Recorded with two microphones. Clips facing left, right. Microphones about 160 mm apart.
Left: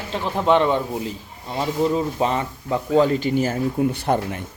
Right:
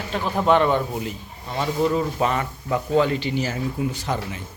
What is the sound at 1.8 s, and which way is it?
Speech, 30° left (ahead or behind).